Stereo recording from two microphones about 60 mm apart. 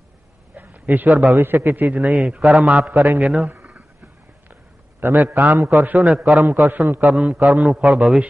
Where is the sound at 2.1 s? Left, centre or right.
Centre.